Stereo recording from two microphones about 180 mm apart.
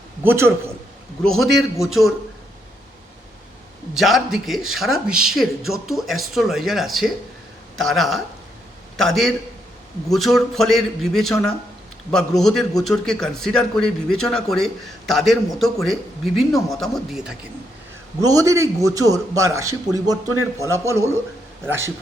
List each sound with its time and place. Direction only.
0.2 s a man's voice: 10° right (ahead or behind)
1.2 s speech: centre (ahead or behind)
3.9 s speech: centre (ahead or behind)
18.2 s a man's voice: 20° right (ahead or behind)